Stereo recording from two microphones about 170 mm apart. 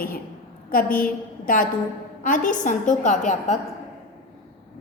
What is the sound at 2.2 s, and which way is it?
A woman's voice, 50° left (ahead or behind).